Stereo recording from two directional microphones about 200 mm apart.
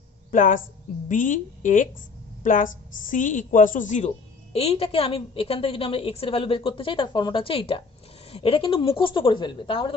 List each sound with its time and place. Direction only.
0.3 s a woman's voice: 40° left (ahead or behind); by 9.9 s 25° left (ahead or behind)